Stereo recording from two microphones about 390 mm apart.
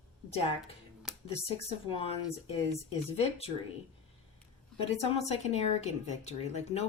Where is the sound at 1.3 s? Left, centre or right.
Centre.